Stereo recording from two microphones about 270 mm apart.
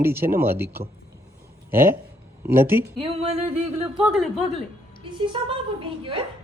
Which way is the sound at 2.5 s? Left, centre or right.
Centre.